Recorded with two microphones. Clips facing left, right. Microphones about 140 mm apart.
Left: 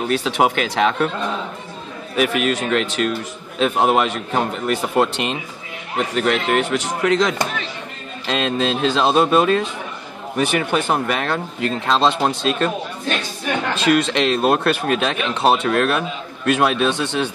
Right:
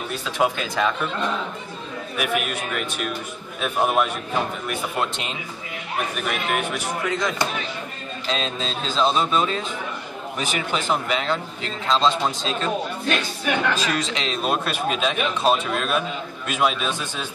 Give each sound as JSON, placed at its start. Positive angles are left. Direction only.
{"t": 0.1, "sound": "speech", "side_deg": 80}
{"t": 2.1, "sound": "speech", "side_deg": 90}
{"t": 8.3, "sound": "speech", "side_deg": 75}
{"t": 13.8, "sound": "speech", "side_deg": 60}